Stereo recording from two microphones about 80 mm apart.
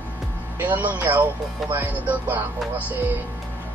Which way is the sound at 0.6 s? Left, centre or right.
Right.